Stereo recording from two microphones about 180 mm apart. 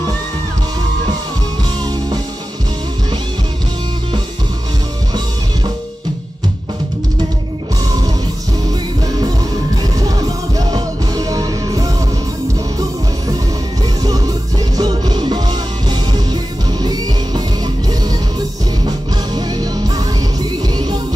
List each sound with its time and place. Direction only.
9.9 s music: 20° right (ahead or behind)
14.8 s music: 20° right (ahead or behind)
19.3 s music: 20° right (ahead or behind)